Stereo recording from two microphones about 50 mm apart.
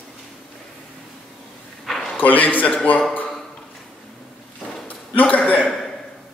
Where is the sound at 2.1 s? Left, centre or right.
Left.